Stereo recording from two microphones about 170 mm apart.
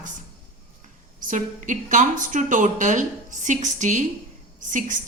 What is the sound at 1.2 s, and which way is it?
A woman's voice, 50° right (ahead or behind).